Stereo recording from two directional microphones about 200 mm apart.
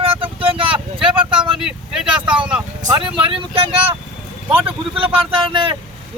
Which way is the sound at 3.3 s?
25° right (ahead or behind).